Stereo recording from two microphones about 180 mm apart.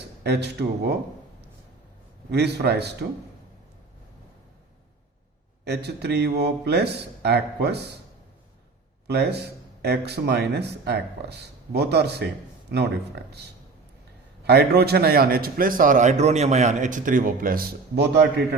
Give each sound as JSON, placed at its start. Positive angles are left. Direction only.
{"t": 0.2, "sound": "speech", "side_deg": -65}
{"t": 2.3, "sound": "speech", "side_deg": -65}
{"t": 5.6, "sound": "speech", "side_deg": -65}
{"t": 9.0, "sound": "a man's voice", "side_deg": -65}